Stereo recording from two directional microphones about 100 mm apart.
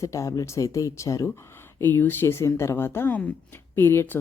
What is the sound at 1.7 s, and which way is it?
A woman's voice, 20° left (ahead or behind).